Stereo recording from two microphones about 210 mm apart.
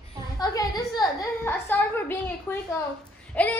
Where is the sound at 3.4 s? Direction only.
5° left (ahead or behind).